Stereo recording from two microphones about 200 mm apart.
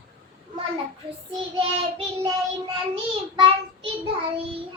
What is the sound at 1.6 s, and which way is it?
Child singing, 30° right (ahead or behind).